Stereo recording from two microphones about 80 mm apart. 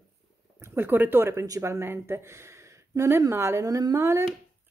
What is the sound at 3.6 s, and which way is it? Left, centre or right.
Speech, right.